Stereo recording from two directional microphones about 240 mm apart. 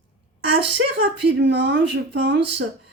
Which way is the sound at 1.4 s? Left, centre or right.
Right.